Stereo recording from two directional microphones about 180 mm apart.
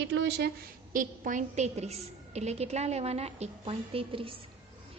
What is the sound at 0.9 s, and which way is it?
A woman's voice, 45° right (ahead or behind).